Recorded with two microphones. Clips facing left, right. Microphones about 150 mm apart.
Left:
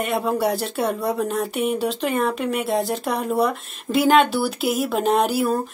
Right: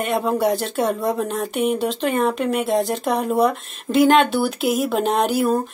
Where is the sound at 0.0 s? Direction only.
Centre (ahead or behind).